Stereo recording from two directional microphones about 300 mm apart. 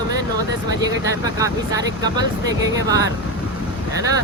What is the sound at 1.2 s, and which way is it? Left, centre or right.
Speech, centre.